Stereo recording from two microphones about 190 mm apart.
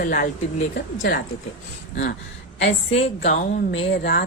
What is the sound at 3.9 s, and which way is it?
Speech, 60° left (ahead or behind).